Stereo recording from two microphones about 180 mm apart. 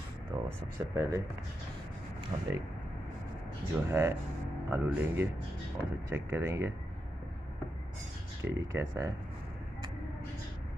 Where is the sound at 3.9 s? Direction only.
15° right (ahead or behind).